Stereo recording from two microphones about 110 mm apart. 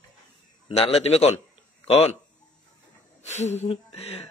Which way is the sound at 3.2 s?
90° left.